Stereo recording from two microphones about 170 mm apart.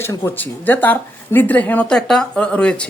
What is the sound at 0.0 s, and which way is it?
A woman's voice, 15° left (ahead or behind).